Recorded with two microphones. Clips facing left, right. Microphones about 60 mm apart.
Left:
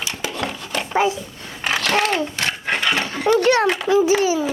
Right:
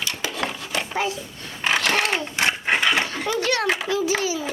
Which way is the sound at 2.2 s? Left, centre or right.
Right.